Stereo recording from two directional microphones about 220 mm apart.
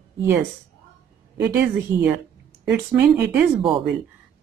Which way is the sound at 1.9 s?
20° right (ahead or behind).